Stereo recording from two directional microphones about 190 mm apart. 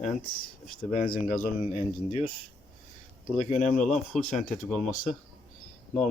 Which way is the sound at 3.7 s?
5° left (ahead or behind).